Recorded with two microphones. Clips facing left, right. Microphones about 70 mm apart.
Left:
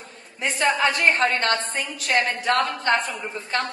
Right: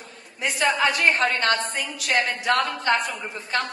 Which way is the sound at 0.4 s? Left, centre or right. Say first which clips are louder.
Left 1 dB; left.